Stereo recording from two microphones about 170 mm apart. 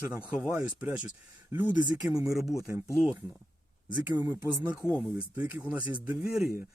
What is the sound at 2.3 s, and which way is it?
Speech, centre (ahead or behind).